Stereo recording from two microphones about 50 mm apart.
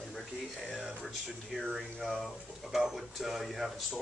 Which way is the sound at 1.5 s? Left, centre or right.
Centre.